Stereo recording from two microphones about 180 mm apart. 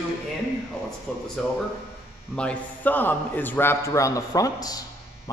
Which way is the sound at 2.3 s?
10° left (ahead or behind).